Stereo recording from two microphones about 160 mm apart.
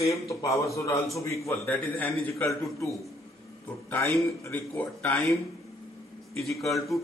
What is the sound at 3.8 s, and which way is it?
Speech, centre (ahead or behind).